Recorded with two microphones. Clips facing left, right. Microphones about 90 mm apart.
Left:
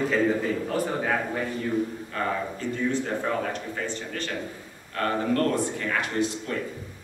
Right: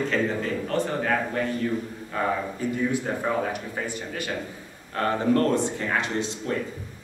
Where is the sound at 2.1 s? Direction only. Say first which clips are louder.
Right 2 dB; 10° right (ahead or behind).